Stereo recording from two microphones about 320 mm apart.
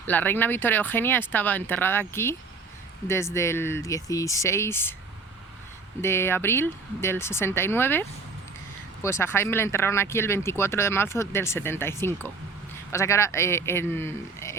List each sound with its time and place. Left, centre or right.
0.1 s speech: centre
6.0 s speech: centre